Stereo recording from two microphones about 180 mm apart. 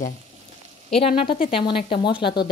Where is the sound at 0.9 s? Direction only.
30° left (ahead or behind).